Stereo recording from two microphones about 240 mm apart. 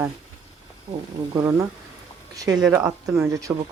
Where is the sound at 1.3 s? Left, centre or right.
Centre.